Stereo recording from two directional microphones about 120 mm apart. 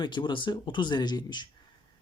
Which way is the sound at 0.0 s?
40° left (ahead or behind).